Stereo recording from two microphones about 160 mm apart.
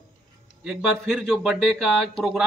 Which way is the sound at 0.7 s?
Centre (ahead or behind).